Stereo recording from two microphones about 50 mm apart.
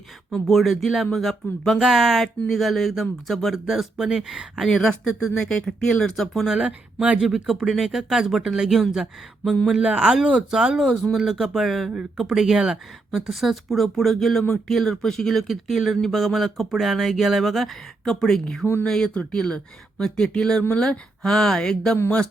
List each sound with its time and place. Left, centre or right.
0.4 s speech: centre
4.6 s speech: centre
5.4 s speech: centre
6.4 s speech: centre
6.7 s speech: right
7.2 s speech: centre
9.8 s speech: right
11.1 s speech: centre
18.6 s speech: left
18.9 s speech: centre